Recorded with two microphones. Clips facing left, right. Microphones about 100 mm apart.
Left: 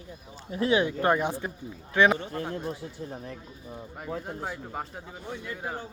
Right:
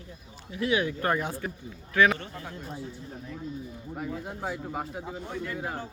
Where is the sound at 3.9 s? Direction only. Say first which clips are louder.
Even; centre (ahead or behind).